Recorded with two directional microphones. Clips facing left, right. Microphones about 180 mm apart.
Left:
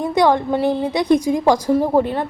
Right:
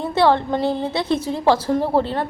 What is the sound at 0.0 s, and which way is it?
A woman's voice, 15° left (ahead or behind).